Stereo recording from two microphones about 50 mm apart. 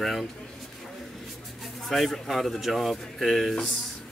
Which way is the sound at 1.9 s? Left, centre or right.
Centre.